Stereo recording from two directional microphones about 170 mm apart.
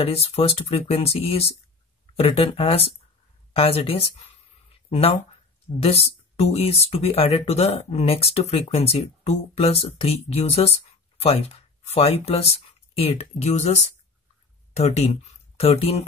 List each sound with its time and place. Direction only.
0.0 s speech: 35° left (ahead or behind)
4.8 s a sound: 35° left (ahead or behind)
5.8 s speech: 35° left (ahead or behind)